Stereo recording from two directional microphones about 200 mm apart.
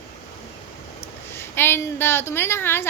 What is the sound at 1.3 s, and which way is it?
Speech, 10° left (ahead or behind).